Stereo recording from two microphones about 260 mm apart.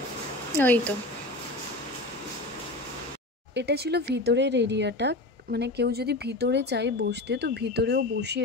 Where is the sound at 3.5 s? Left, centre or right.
Right.